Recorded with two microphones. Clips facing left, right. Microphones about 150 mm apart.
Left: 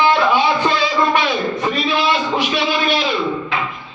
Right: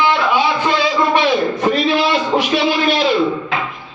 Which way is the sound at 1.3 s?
Centre (ahead or behind).